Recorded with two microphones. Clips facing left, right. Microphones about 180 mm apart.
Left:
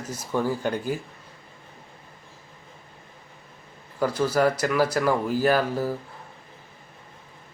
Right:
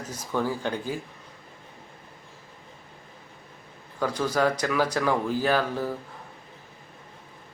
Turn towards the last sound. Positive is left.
turn(degrees=10)  # may be behind; listen again after turning